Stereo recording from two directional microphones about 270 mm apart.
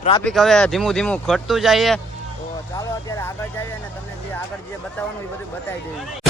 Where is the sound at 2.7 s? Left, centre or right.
Centre.